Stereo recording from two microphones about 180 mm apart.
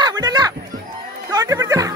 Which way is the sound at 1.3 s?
20° right (ahead or behind).